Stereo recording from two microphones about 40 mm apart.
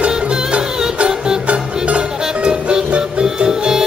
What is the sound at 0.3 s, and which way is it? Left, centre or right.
Music, right.